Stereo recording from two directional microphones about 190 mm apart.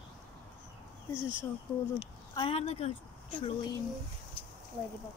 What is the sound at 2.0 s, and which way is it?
Speech, 30° left (ahead or behind).